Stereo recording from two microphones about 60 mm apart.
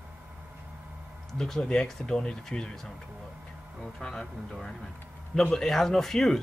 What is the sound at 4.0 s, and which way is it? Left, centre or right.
Speech, centre.